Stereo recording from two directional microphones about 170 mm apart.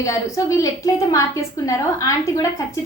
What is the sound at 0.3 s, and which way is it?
A woman's voice, 20° left (ahead or behind).